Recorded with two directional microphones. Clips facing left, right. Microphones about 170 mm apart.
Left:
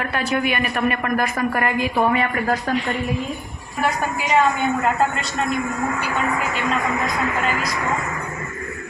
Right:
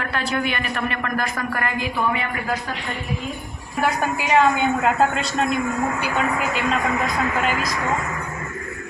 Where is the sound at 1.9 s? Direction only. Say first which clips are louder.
Left 6 dB; 40° left (ahead or behind).